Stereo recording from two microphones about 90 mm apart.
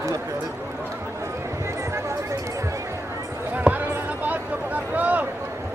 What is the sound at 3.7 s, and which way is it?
Basketball bounce, 5° right (ahead or behind).